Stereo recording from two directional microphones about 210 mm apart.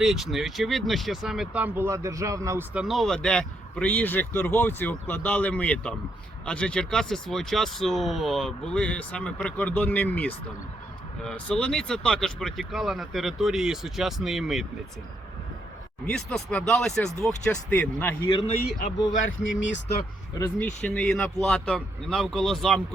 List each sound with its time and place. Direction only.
0.0 s speech: centre (ahead or behind)
16.0 s speech: 5° left (ahead or behind)
18.4 s speech: 35° left (ahead or behind)
19.4 s speech: 65° left (ahead or behind)
20.8 s speech: 5° left (ahead or behind)